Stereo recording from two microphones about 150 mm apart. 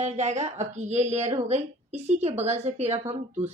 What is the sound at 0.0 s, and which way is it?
Speech, 50° right (ahead or behind).